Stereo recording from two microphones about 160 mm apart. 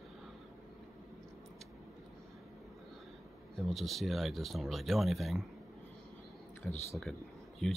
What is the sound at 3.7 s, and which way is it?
Speech, centre (ahead or behind).